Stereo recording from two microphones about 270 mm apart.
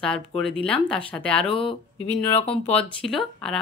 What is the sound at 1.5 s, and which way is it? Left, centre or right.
Speech, centre.